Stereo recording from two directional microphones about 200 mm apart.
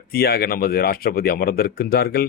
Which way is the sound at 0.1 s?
50° left (ahead or behind).